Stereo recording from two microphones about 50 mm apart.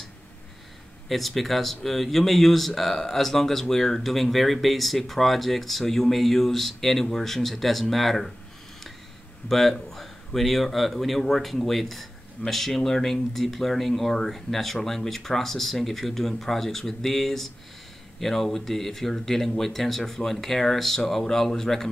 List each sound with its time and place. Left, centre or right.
1.0 s speech: centre
9.5 s speech: centre